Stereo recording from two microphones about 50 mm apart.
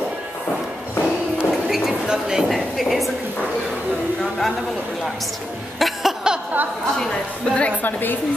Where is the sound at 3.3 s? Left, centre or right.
Left.